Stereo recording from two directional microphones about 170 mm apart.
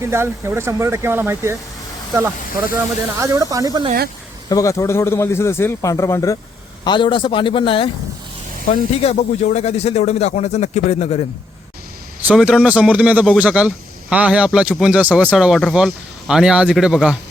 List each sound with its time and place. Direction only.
0.0 s speech: 15° right (ahead or behind)
3.2 s speech: 20° right (ahead or behind)
4.4 s a man's voice: 20° left (ahead or behind)
6.8 s a man's voice: 30° left (ahead or behind)
9.0 s speech: 40° left (ahead or behind)
12.2 s speech: 5° right (ahead or behind)